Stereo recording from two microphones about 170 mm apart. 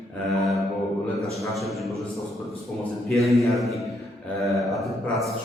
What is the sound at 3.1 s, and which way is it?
A man's voice, centre (ahead or behind).